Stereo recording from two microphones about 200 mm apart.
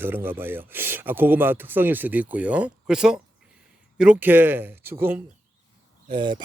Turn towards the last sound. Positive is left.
turn(degrees=-25)  # may be behind; listen again after turning